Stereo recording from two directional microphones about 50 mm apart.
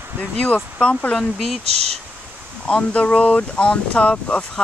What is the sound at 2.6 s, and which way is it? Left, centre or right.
Speech, left.